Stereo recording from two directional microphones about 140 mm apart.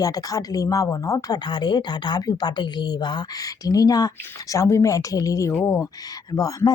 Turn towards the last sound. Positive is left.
turn(degrees=25)  # may be behind; listen again after turning